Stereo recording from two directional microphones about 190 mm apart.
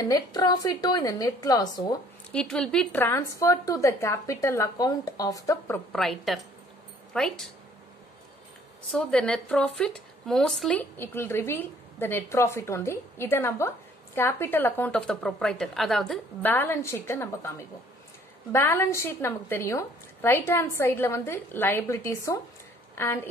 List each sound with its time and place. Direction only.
0.0 s a woman's voice: 20° left (ahead or behind)
2.3 s speech: 5° left (ahead or behind)
5.9 s a woman's voice: centre (ahead or behind)
8.9 s speech: 5° left (ahead or behind)
16.5 s speech: 10° left (ahead or behind)
18.5 s a woman's voice: 10° left (ahead or behind)